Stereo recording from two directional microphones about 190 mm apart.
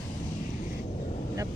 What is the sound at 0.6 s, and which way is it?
Vehicle, 45° left (ahead or behind).